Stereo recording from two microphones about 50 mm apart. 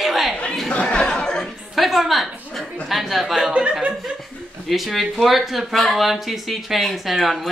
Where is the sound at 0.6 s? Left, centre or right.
Left.